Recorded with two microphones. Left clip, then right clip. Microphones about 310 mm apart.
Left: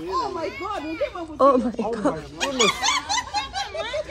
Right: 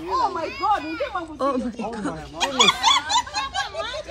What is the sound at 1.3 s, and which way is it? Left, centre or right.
Speech, left.